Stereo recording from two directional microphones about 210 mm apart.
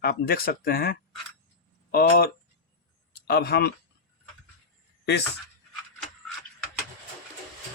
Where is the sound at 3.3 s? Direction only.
50° left (ahead or behind).